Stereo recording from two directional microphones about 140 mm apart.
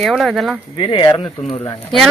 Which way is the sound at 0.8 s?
35° left (ahead or behind).